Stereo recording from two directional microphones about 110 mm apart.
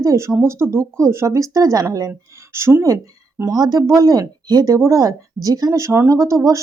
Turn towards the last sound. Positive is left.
turn(degrees=-30)  # may be behind; listen again after turning